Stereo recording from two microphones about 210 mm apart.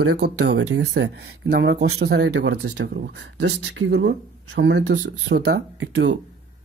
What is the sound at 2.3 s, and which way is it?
Speech, 75° right (ahead or behind).